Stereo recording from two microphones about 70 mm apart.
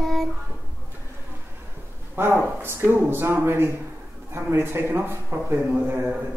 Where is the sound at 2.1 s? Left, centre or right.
Right.